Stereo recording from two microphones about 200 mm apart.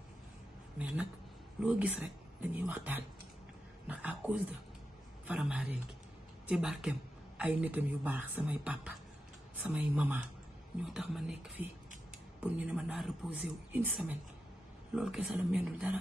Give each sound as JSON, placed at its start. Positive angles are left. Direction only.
{"t": 0.7, "sound": "a man's voice", "side_deg": -5}